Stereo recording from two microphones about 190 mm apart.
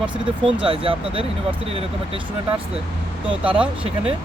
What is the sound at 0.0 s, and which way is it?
Speech, 25° right (ahead or behind).